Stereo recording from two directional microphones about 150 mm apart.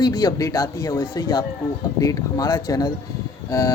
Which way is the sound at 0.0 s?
25° left (ahead or behind).